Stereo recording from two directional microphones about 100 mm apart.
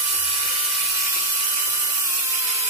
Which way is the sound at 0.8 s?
30° right (ahead or behind).